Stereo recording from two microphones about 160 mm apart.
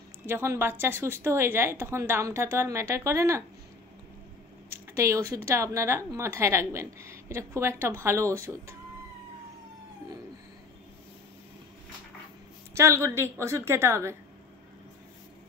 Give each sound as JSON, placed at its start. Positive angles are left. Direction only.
{"t": 0.3, "sound": "speech", "side_deg": -15}
{"t": 4.9, "sound": "speech", "side_deg": -15}
{"t": 12.7, "sound": "speech", "side_deg": -20}